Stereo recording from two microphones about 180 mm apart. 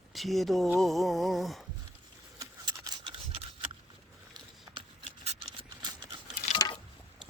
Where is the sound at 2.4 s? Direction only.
25° right (ahead or behind).